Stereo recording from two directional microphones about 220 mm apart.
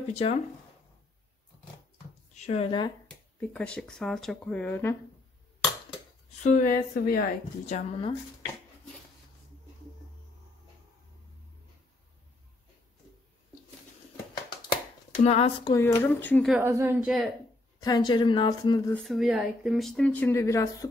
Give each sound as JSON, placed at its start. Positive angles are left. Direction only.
{"t": 0.1, "sound": "speech", "side_deg": 30}
{"t": 2.3, "sound": "speech", "side_deg": 30}
{"t": 3.3, "sound": "speech", "side_deg": 5}
{"t": 6.4, "sound": "a woman's voice", "side_deg": 40}
{"t": 7.7, "sound": "speech", "side_deg": 25}
{"t": 15.2, "sound": "speech", "side_deg": 25}
{"t": 15.7, "sound": "speech", "side_deg": 10}
{"t": 16.5, "sound": "a woman's voice", "side_deg": -10}
{"t": 17.7, "sound": "speech", "side_deg": 15}
{"t": 18.9, "sound": "speech", "side_deg": 0}